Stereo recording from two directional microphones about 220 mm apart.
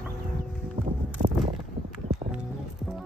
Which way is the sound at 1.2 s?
40° right (ahead or behind).